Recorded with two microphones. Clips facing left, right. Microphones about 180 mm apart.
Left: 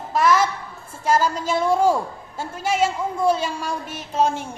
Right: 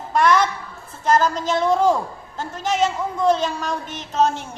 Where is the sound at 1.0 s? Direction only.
10° left (ahead or behind).